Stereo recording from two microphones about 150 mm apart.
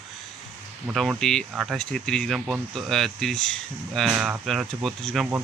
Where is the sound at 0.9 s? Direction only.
Centre (ahead or behind).